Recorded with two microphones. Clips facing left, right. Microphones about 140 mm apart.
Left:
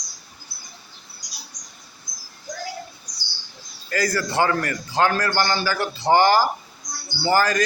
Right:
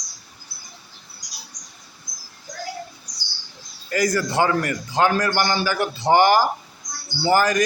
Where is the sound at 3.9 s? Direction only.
20° right (ahead or behind).